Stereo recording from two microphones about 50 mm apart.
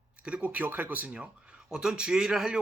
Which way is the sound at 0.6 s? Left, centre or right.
Right.